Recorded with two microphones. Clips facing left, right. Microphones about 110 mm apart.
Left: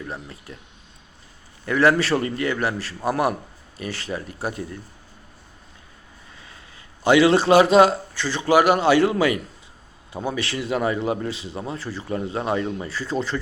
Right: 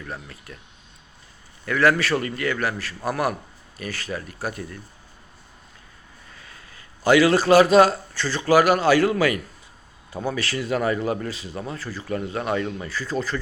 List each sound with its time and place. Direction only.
0.0 s a man's voice: 25° left (ahead or behind)
1.6 s a man's voice: 25° left (ahead or behind)
6.4 s a man's voice: 20° left (ahead or behind)